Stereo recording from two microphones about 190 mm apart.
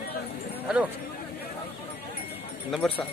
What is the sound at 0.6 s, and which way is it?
Speech, 5° right (ahead or behind).